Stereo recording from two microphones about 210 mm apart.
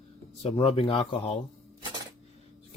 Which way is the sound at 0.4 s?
30° left (ahead or behind).